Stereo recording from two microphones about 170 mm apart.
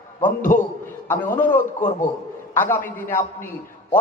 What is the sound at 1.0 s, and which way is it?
A man's voice, 10° left (ahead or behind).